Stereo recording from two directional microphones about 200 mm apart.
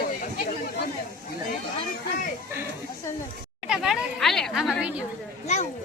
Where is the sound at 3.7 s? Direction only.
Centre (ahead or behind).